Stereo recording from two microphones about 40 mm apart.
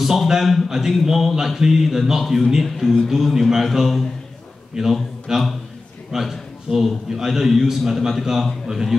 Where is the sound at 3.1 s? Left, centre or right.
Centre.